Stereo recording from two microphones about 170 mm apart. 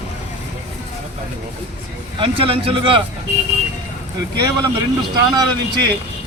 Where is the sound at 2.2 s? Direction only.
30° right (ahead or behind).